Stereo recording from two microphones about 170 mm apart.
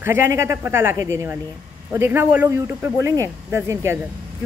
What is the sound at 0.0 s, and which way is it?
Speech, 15° right (ahead or behind).